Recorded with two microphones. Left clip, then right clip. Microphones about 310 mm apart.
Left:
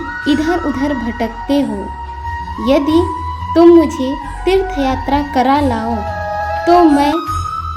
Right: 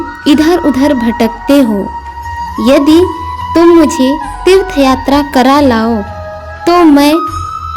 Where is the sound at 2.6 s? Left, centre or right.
Right.